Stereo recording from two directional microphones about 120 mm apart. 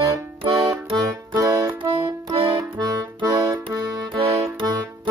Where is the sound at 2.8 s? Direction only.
30° right (ahead or behind).